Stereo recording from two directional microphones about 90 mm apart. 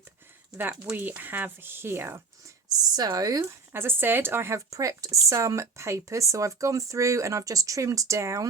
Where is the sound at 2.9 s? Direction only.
45° right (ahead or behind).